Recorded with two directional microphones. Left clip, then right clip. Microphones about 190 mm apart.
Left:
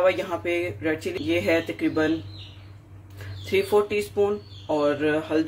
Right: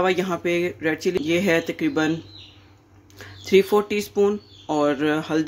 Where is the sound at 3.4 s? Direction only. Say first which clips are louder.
Right 4 dB; 55° right (ahead or behind).